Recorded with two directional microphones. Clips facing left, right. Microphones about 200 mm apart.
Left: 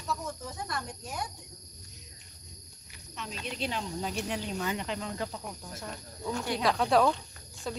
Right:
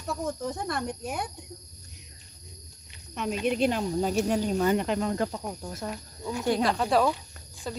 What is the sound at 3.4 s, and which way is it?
Speech, 55° right (ahead or behind).